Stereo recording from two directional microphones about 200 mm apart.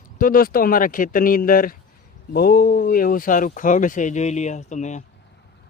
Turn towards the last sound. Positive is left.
turn(degrees=35)  # may be behind; listen again after turning